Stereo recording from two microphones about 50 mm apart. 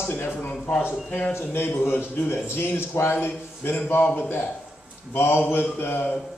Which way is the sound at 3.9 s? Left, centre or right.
Left.